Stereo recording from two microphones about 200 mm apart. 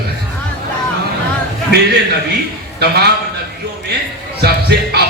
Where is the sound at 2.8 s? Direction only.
55° right (ahead or behind).